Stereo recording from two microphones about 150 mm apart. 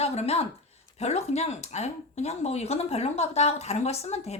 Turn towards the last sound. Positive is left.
turn(degrees=45)  # may be behind; listen again after turning